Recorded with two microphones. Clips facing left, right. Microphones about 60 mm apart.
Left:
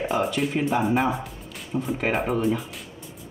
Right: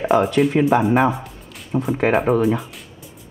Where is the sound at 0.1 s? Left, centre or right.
Right.